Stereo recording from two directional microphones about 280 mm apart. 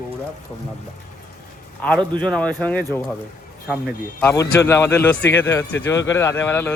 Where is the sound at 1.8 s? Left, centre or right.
Centre.